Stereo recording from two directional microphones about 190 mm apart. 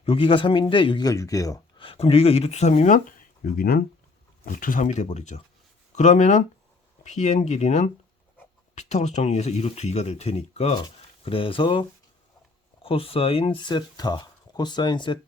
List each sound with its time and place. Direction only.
0.0 s speech: 30° left (ahead or behind)
1.9 s speech: 30° left (ahead or behind)